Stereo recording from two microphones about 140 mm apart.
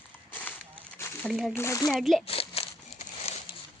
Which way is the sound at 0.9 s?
20° left (ahead or behind).